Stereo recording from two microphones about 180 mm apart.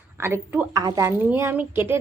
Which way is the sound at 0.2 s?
15° right (ahead or behind).